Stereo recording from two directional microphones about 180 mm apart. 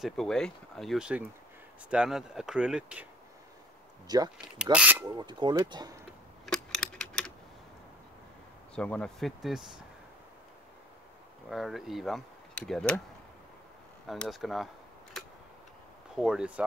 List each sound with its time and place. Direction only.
0.0 s speech: centre (ahead or behind)
4.1 s speech: 20° right (ahead or behind)
4.7 s speech: 10° right (ahead or behind)
5.1 s speech: 25° right (ahead or behind)
6.4 s typing: centre (ahead or behind)
8.7 s speech: 5° left (ahead or behind)
11.4 s speech: centre (ahead or behind)
14.0 s speech: 5° left (ahead or behind)
16.2 s speech: 5° right (ahead or behind)